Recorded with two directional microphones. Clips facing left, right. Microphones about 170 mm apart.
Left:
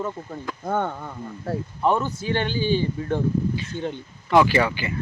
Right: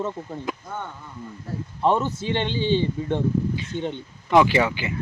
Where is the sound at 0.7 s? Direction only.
60° left (ahead or behind).